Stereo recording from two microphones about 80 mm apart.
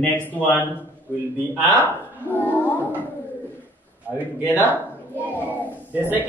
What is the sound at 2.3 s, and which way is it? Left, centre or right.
Speech, left.